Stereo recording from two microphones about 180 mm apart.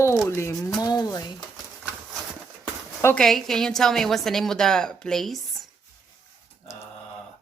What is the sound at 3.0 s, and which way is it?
A woman's voice, 5° left (ahead or behind).